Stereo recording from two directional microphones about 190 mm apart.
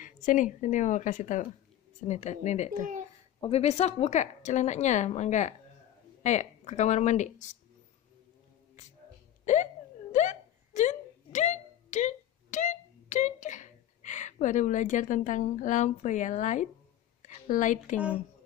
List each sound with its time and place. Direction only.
0.0 s a woman's voice: 45° left (ahead or behind)
9.4 s hiccup: 40° left (ahead or behind)
10.1 s a sound: 40° left (ahead or behind)